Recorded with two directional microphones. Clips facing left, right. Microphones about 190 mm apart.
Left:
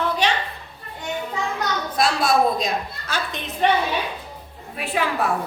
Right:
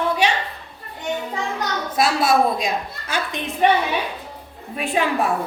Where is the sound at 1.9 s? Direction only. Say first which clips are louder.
Right 2 dB; 5° right (ahead or behind).